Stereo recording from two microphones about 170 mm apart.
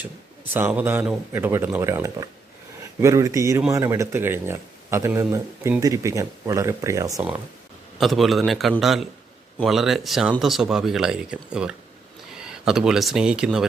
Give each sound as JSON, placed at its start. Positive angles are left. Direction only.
{"t": 0.5, "sound": "speech", "side_deg": -10}
{"t": 7.9, "sound": "speech", "side_deg": 0}